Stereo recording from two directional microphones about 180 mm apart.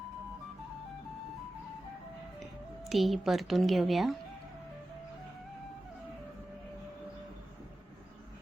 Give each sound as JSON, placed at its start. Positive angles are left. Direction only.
{"t": 2.9, "sound": "a woman's voice", "side_deg": 0}